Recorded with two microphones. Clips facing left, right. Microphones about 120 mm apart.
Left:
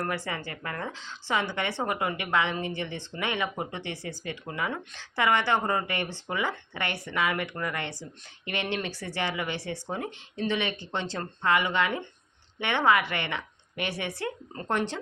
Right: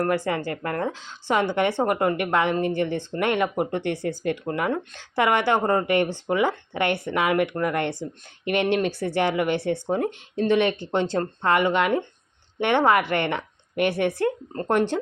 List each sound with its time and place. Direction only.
0.0 s speech: 50° right (ahead or behind)